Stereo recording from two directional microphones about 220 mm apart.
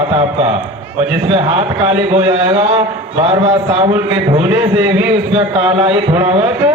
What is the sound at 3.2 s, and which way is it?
A man's voice, 25° right (ahead or behind).